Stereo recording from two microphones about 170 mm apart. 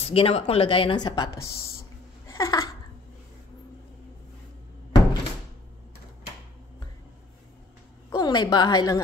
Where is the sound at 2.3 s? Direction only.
20° left (ahead or behind).